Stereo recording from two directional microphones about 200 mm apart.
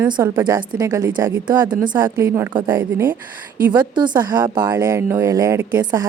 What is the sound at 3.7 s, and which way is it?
A woman's voice, 20° right (ahead or behind).